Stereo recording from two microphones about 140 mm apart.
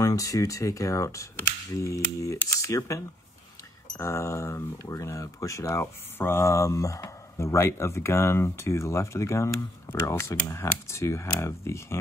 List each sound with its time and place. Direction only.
0.0 s speech: 25° left (ahead or behind)